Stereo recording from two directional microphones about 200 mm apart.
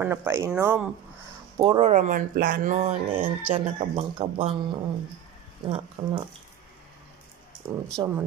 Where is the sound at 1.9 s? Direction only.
40° right (ahead or behind).